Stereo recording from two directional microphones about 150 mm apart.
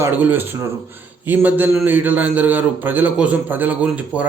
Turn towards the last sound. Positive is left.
turn(degrees=-10)  # may be behind; listen again after turning